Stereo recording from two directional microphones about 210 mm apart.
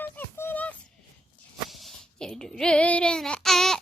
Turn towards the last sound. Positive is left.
turn(degrees=0)  # may be behind; listen again after turning